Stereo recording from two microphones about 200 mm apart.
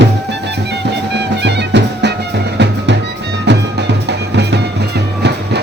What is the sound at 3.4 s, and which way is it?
Music, 60° right (ahead or behind).